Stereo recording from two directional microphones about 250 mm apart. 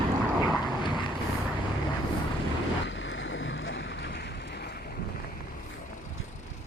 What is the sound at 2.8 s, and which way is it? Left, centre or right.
Boat, left.